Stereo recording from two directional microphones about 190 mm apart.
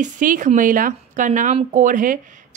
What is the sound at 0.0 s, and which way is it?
Speech, 45° right (ahead or behind).